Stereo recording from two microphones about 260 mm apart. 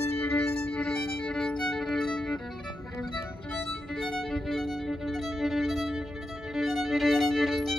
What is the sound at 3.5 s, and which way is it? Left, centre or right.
Violin, centre.